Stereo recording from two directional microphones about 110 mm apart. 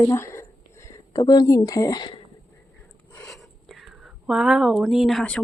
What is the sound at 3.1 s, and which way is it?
Speech, centre (ahead or behind).